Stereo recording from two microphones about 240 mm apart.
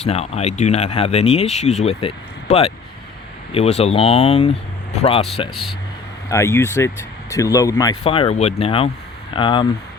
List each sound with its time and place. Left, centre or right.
0.0 s speech: left
6.2 s speech: centre